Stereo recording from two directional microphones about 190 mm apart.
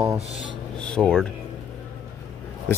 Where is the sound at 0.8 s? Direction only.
5° left (ahead or behind).